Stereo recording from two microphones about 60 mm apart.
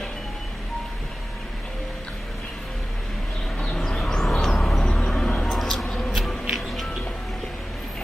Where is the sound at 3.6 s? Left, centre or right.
Centre.